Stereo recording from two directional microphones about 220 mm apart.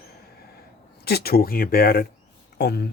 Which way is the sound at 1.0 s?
45° left (ahead or behind).